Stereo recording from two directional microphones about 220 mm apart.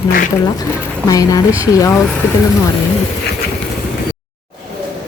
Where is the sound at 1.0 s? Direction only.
15° left (ahead or behind).